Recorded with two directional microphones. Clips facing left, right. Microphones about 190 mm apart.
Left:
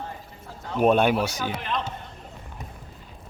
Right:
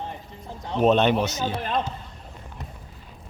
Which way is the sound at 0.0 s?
20° right (ahead or behind).